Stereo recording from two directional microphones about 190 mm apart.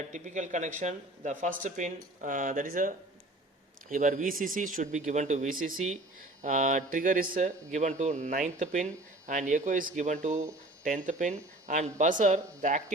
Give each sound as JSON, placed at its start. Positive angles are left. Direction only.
{"t": 0.1, "sound": "speech", "side_deg": -40}